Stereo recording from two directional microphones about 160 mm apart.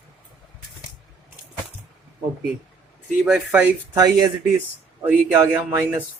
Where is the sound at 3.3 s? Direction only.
5° right (ahead or behind).